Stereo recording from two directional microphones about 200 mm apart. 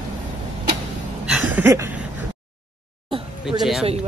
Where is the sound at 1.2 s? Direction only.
5° right (ahead or behind).